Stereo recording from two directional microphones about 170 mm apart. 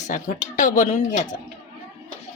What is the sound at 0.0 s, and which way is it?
Speech, 50° left (ahead or behind).